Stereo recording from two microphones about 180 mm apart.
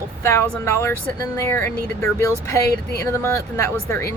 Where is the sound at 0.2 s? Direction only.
15° left (ahead or behind).